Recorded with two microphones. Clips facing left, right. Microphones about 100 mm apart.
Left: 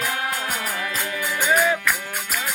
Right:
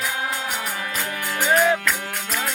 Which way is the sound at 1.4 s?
15° right (ahead or behind).